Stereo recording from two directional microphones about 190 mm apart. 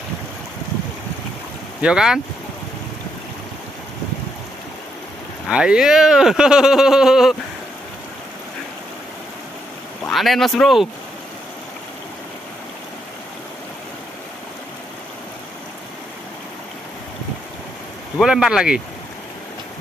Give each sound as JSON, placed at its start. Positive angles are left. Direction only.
{"t": 1.8, "sound": "speech", "side_deg": -5}
{"t": 5.5, "sound": "speech", "side_deg": -5}
{"t": 10.0, "sound": "speech", "side_deg": 0}
{"t": 18.1, "sound": "speech", "side_deg": -5}